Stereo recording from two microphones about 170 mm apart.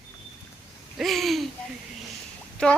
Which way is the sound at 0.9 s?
Centre (ahead or behind).